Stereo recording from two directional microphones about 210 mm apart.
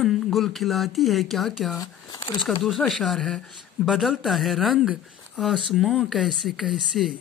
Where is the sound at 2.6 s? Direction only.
Centre (ahead or behind).